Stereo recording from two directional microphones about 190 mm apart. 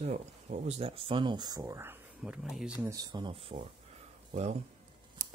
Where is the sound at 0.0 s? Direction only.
35° right (ahead or behind); by 2.7 s 5° right (ahead or behind).